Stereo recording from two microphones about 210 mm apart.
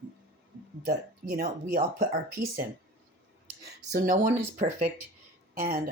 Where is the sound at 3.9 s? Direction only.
40° right (ahead or behind).